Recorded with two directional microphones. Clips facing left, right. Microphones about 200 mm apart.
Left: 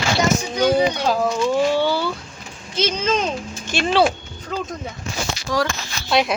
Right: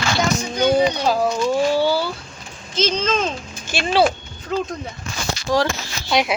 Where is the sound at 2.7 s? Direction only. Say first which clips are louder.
Even; 10° left (ahead or behind).